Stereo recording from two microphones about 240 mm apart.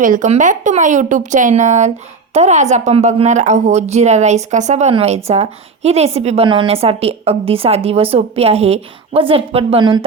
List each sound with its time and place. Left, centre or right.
0.0 s a woman's voice: right